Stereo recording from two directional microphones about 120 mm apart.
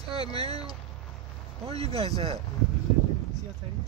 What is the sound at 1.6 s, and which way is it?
Speech, 60° right (ahead or behind).